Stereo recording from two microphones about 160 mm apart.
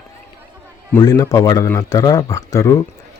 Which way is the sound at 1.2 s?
20° left (ahead or behind).